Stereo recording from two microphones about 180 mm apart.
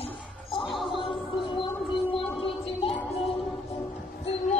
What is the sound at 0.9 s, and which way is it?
Music, 30° left (ahead or behind).